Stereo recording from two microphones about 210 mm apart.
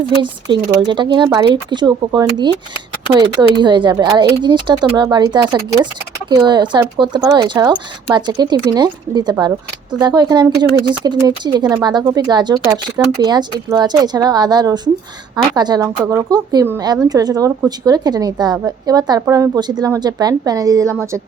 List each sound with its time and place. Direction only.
0.2 s a woman's voice: 20° right (ahead or behind)